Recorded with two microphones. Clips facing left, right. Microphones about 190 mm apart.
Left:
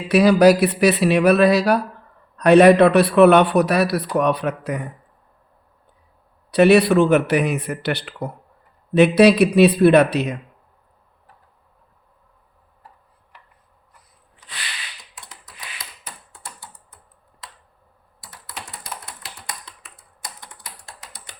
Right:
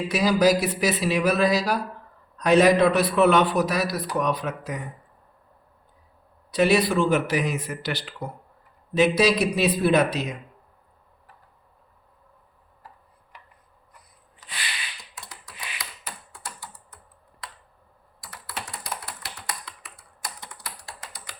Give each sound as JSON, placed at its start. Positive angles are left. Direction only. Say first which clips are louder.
{"t": 0.1, "sound": "a man's voice", "louder": "left 8 dB", "side_deg": 65}
{"t": 6.5, "sound": "a man's voice", "louder": "left 7 dB", "side_deg": 65}
{"t": 19.5, "sound": "typing", "louder": "right 1 dB", "side_deg": 20}